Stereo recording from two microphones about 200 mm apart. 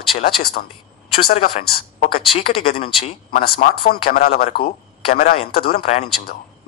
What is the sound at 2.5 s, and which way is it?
Speech, 30° left (ahead or behind).